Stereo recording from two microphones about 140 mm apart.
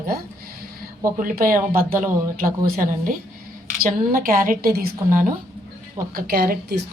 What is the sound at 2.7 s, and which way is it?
Speech, 75° right (ahead or behind).